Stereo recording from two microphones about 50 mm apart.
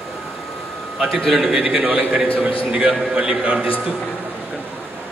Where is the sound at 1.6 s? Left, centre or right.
Centre.